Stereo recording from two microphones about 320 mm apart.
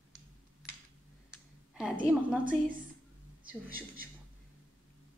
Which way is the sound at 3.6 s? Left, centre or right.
Right.